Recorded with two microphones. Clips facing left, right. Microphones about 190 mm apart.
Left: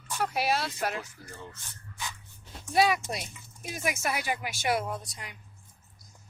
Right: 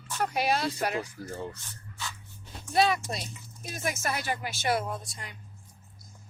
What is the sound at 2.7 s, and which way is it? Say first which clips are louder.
Speech: even; 10° left (ahead or behind).